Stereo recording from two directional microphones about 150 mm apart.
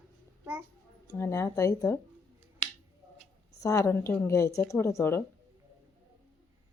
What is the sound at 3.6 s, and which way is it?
Speech, 20° left (ahead or behind).